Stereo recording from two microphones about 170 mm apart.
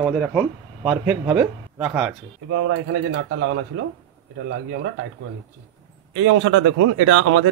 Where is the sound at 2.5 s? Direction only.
85° right.